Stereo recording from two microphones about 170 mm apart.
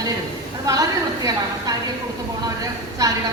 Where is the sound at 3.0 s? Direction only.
20° right (ahead or behind).